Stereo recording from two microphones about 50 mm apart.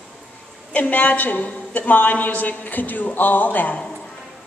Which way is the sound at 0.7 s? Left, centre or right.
Left.